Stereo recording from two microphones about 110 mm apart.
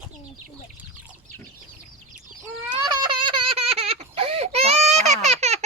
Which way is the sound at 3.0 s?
45° right (ahead or behind).